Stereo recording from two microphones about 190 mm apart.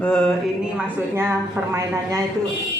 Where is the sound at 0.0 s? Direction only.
5° left (ahead or behind).